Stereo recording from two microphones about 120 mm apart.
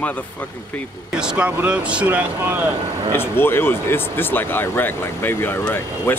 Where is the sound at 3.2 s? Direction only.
20° left (ahead or behind).